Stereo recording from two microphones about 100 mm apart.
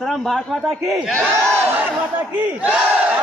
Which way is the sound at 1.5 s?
20° right (ahead or behind).